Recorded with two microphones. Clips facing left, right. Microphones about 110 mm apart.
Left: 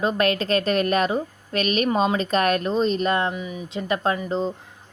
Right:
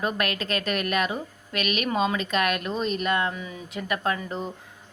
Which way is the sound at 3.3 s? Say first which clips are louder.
Left 5 dB; 20° left (ahead or behind).